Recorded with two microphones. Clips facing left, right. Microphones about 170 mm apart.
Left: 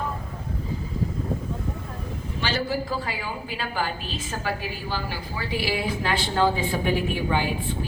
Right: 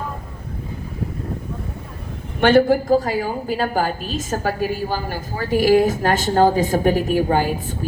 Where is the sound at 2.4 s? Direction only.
55° right (ahead or behind).